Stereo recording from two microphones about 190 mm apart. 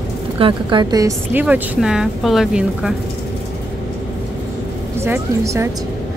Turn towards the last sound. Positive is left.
turn(degrees=-15)  # may be behind; listen again after turning